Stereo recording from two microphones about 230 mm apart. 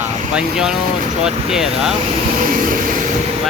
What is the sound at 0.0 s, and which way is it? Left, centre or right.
Vehicle, centre.